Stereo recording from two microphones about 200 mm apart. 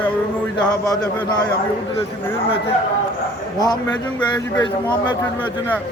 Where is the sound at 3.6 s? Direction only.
20° left (ahead or behind).